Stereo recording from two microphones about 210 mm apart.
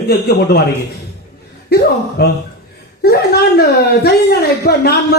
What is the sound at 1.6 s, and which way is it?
A woman's voice, 50° left (ahead or behind).